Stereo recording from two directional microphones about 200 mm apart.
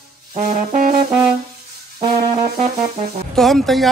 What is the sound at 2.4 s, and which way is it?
Music, 35° right (ahead or behind).